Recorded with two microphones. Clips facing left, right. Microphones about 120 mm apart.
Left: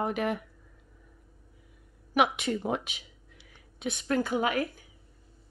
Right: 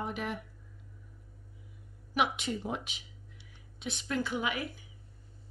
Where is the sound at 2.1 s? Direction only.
60° left (ahead or behind).